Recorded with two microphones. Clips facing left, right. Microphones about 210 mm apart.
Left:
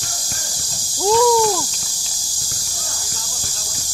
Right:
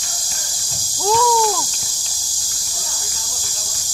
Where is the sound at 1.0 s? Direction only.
15° left (ahead or behind).